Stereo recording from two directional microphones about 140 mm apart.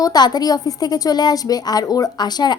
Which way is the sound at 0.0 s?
30° left (ahead or behind).